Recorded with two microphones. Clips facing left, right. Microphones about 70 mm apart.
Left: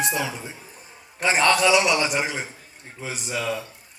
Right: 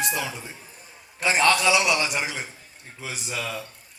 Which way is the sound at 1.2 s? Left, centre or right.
Left.